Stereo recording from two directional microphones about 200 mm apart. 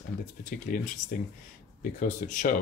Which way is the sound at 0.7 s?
45° left (ahead or behind).